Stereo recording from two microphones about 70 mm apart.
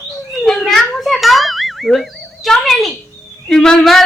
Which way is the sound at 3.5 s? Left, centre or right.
Centre.